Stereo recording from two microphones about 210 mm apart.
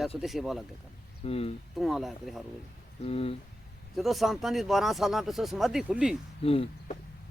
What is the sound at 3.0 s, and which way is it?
Speech, 30° left (ahead or behind).